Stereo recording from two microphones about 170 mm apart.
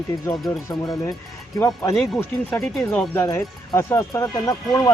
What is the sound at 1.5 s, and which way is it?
Speech, 15° left (ahead or behind).